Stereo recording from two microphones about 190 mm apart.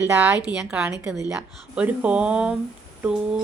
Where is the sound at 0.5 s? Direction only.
5° right (ahead or behind).